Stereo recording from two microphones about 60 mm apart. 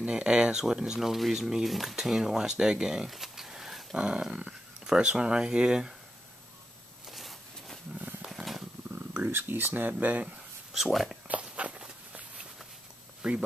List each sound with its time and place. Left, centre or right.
0.0 s speech: centre
7.1 s a sound: centre
8.3 s purr: centre
8.9 s speech: right
10.7 s speech: centre
11.4 s walk: right
13.2 s speech: centre